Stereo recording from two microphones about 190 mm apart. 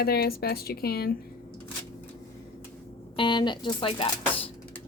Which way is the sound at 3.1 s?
25° left (ahead or behind).